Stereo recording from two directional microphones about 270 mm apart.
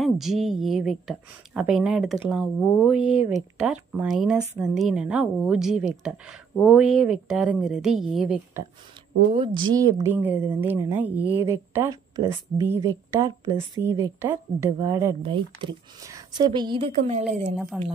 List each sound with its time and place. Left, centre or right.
0.0 s speech: centre
9.3 s a woman's voice: centre
17.6 s speech: centre